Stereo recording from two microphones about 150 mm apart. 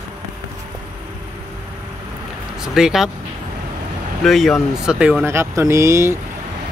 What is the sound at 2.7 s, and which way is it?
Speech, 5° right (ahead or behind).